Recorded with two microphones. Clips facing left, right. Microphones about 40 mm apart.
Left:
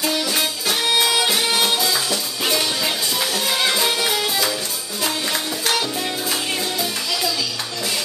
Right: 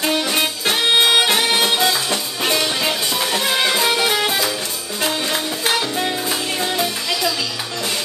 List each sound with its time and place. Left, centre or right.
0.0 s music: right
1.5 s music: right
3.6 s music: centre
3.9 s music: right
5.0 s music: centre